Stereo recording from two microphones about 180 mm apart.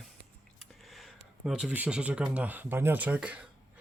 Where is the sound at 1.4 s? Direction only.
5° right (ahead or behind).